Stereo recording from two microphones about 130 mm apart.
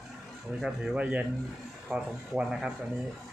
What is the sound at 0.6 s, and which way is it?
Speech, 5° right (ahead or behind).